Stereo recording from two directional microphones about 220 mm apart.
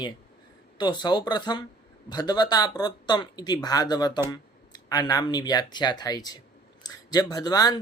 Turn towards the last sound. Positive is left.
turn(degrees=15)  # may be behind; listen again after turning